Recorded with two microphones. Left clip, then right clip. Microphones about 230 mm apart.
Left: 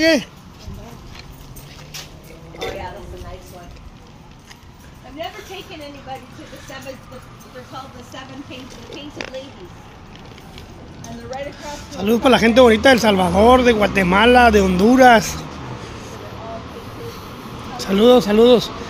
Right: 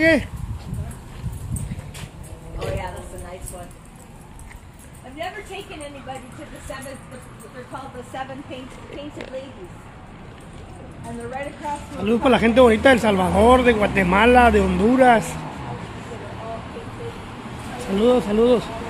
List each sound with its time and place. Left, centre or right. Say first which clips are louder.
0.0 s speech: left 1 dB; centre
11.2 s speech: right 1 dB; centre
17.9 s speech: left 6 dB; left